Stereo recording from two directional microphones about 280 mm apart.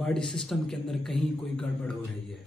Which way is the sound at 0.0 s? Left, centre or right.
Centre.